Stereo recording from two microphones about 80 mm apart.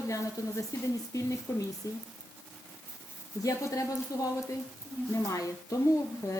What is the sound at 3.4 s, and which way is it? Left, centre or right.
Speech, left.